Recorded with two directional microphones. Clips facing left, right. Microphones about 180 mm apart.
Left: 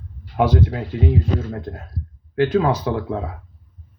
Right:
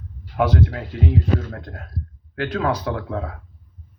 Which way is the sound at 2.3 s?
15° left (ahead or behind).